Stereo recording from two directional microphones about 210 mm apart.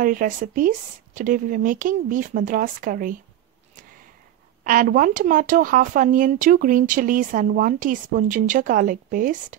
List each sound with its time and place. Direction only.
0.0 s speech: 40° right (ahead or behind)
4.6 s speech: 40° right (ahead or behind)